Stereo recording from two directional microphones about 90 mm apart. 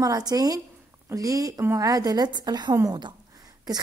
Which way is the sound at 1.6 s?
25° right (ahead or behind).